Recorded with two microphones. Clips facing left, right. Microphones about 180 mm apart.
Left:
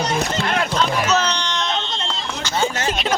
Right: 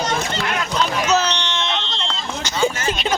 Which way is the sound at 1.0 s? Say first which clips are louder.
Right 1 dB; 10° right (ahead or behind).